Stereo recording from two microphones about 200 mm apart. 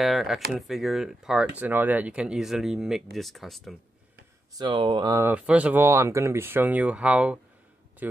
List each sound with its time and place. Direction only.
0.0 s speech: centre (ahead or behind)
4.6 s speech: 20° right (ahead or behind)